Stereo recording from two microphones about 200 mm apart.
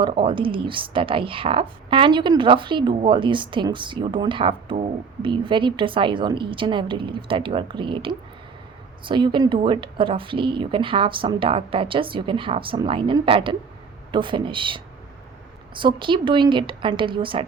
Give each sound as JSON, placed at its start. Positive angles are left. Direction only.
{"t": 0.0, "sound": "speech", "side_deg": -25}